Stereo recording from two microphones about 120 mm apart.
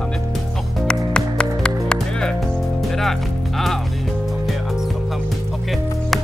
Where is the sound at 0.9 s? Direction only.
5° left (ahead or behind).